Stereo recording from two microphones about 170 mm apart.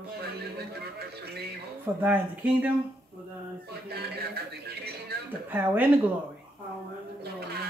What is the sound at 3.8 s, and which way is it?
Music, 70° right (ahead or behind).